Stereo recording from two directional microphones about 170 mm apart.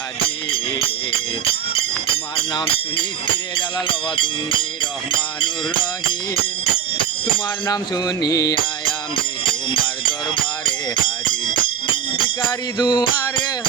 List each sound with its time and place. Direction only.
3.8 s mantra: 30° left (ahead or behind)
7.7 s mantra: 20° left (ahead or behind)
9.4 s music: 30° left (ahead or behind)
12.8 s mantra: 25° left (ahead or behind)